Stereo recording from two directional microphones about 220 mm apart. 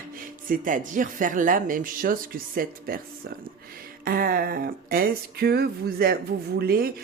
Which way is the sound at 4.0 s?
40° right (ahead or behind).